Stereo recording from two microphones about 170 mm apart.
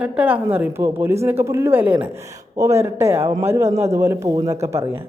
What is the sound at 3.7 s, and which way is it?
Speech, 40° right (ahead or behind).